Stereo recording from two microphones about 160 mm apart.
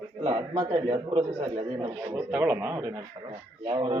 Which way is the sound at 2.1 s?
10° right (ahead or behind).